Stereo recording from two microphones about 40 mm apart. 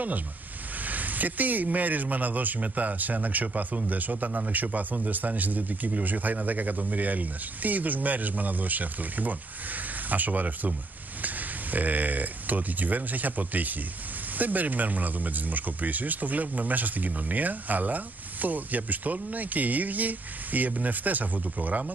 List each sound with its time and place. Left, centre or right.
0.8 s speech: right